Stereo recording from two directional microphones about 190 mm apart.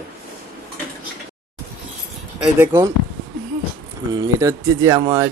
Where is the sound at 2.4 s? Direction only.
10° right (ahead or behind).